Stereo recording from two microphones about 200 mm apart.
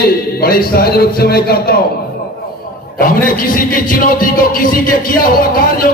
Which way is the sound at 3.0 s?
45° left (ahead or behind).